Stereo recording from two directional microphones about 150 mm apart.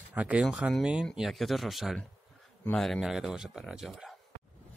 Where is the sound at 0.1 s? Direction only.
10° right (ahead or behind).